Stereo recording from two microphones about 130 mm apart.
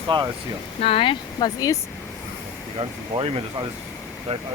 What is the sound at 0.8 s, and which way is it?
Speech, 45° left (ahead or behind).